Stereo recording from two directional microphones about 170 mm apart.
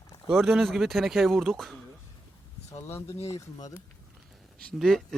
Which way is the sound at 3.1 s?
40° left (ahead or behind).